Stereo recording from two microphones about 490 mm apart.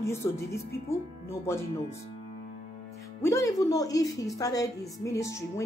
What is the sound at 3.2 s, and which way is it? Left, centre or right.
A woman's voice, centre.